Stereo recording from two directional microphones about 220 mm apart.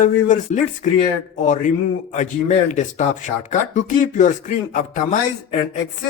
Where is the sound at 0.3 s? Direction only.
35° left (ahead or behind).